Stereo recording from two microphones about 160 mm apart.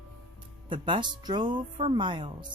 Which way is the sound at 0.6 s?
30° right (ahead or behind).